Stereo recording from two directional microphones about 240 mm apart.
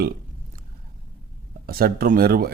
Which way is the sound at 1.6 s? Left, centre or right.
Right.